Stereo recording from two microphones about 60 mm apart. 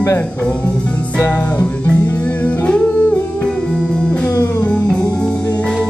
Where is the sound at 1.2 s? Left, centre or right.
Left.